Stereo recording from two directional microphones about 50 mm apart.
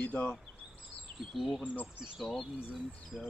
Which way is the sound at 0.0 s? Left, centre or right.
Left.